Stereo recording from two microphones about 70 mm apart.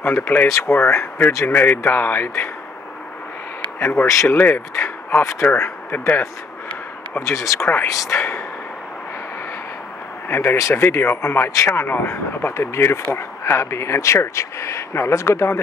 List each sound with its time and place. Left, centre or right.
0.0 s speech: left
4.0 s speech: left
4.3 s speech: left
7.2 s speech: left
10.2 s speech: left